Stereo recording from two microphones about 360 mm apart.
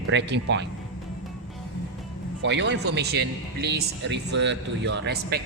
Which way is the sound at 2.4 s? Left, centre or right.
Right.